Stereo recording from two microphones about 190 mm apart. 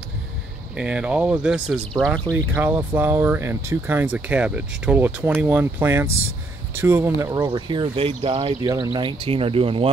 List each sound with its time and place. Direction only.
0.7 s speech: 5° right (ahead or behind)
2.3 s speech: 10° right (ahead or behind); by 9.8 s 30° right (ahead or behind)